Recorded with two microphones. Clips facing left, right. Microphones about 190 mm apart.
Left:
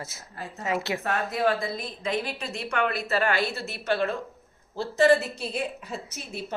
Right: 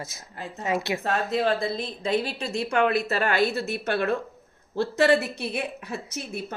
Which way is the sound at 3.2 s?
45° right (ahead or behind).